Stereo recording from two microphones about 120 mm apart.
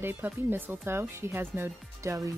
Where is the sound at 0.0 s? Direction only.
15° right (ahead or behind).